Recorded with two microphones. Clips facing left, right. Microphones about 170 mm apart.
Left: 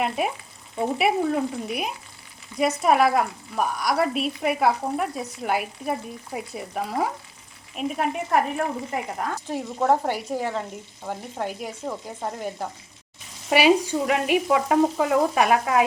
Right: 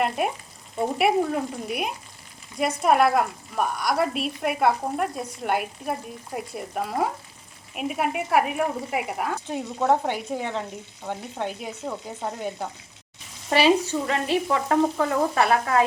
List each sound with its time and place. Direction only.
0.8 s a woman's voice: centre (ahead or behind)
9.5 s frying: 5° left (ahead or behind)
11.0 s a woman's voice: 5° left (ahead or behind)
13.5 s frying: 10° left (ahead or behind)